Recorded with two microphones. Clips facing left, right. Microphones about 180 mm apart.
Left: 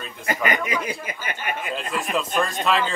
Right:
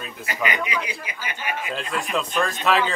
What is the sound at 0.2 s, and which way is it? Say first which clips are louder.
Speech: left 3 dB; 50° left (ahead or behind).